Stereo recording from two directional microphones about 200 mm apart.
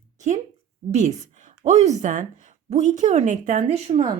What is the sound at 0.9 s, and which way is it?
Speech, 35° right (ahead or behind).